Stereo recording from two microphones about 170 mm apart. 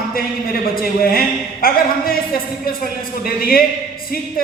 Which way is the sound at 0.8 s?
60° left (ahead or behind).